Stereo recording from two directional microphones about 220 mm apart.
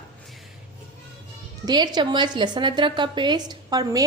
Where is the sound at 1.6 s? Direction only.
20° right (ahead or behind).